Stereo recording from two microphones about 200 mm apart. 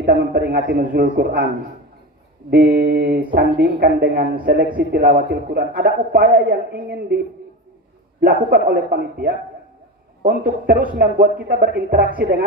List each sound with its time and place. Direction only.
0.0 s a man's voice: 45° right (ahead or behind)
2.8 s a man's voice: 40° right (ahead or behind)
8.2 s a man's voice: 45° right (ahead or behind)